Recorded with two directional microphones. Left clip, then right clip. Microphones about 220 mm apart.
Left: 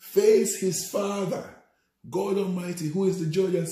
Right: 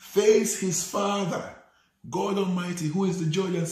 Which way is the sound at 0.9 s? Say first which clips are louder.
Right 1 dB; 20° right (ahead or behind).